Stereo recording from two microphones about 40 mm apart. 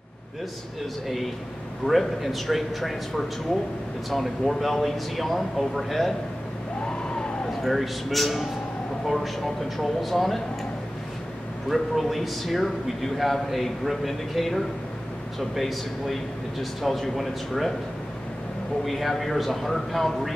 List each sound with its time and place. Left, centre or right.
1.0 s a man's voice: centre
6.8 s emergency vehicle: left
7.6 s a man's voice: centre
11.7 s a man's voice: centre
18.9 s a man's voice: centre